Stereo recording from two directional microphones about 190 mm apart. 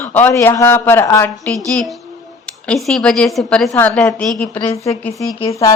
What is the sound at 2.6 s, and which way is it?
Speech, centre (ahead or behind).